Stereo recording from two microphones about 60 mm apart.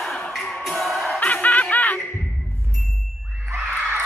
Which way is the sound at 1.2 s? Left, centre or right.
Left.